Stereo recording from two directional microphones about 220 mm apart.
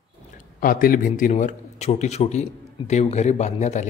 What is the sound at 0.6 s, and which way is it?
A man's voice, 40° left (ahead or behind).